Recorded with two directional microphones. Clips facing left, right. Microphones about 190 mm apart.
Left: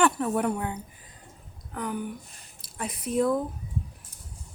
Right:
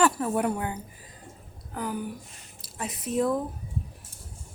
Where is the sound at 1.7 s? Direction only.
5° right (ahead or behind).